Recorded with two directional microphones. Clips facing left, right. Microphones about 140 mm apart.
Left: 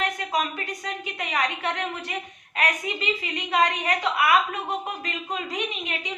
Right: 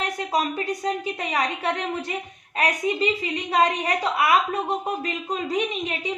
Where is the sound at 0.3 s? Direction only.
35° right (ahead or behind).